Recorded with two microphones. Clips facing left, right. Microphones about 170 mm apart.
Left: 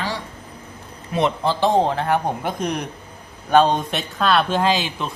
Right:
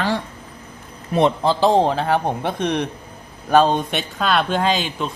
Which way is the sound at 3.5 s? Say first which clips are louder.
Right 1 dB; centre (ahead or behind).